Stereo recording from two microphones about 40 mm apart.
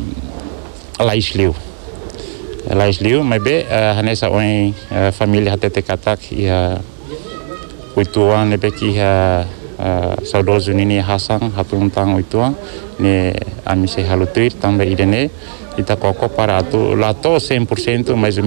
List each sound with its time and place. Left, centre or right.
0.9 s speech: centre
2.7 s speech: centre
4.9 s speech: centre
7.9 s speech: centre